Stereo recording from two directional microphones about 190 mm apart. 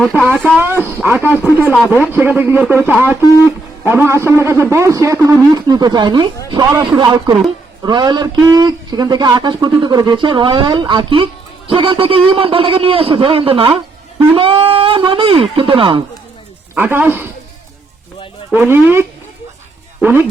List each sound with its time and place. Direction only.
0.0 s speech: 5° left (ahead or behind)
0.3 s speech: 5° right (ahead or behind); by 16.0 s 25° right (ahead or behind)
16.7 s speech: 10° right (ahead or behind)
18.5 s speech: 10° right (ahead or behind)